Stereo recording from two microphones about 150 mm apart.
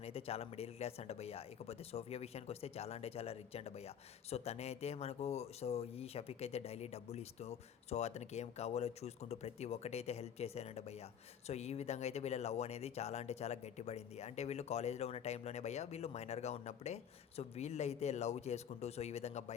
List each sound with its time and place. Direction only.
0.0 s speech: 40° left (ahead or behind)